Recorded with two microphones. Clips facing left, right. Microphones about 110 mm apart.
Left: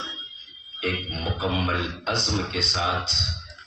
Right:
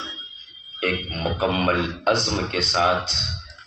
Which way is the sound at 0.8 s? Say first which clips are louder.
Right 4 dB; 60° right (ahead or behind).